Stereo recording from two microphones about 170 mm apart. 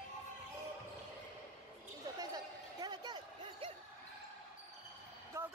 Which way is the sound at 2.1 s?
25° right (ahead or behind).